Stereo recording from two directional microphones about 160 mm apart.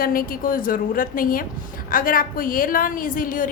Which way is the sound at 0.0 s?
65° left (ahead or behind).